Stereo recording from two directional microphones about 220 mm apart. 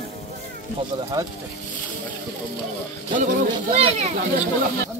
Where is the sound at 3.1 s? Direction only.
30° right (ahead or behind).